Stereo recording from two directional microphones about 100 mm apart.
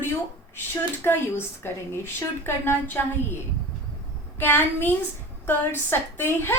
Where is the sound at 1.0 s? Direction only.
20° left (ahead or behind).